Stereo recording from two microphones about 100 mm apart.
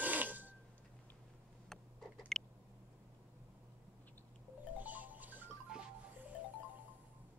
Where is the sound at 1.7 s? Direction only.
5° left (ahead or behind).